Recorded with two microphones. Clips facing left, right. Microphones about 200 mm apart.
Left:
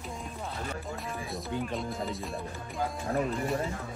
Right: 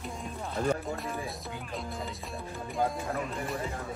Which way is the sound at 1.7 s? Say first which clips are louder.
Left 4 dB; centre (ahead or behind).